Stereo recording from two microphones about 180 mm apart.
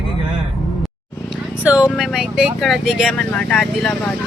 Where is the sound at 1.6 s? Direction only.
5° right (ahead or behind).